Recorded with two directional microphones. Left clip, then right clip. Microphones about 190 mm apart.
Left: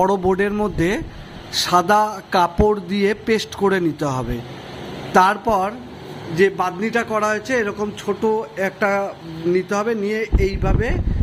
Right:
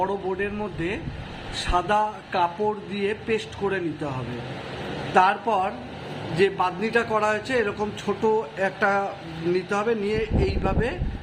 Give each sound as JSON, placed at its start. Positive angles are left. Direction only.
{"t": 0.0, "sound": "speech", "side_deg": 55}
{"t": 5.1, "sound": "a man's voice", "side_deg": 45}